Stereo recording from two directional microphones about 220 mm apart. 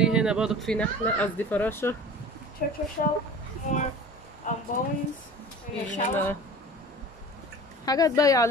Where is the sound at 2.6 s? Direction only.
40° left (ahead or behind).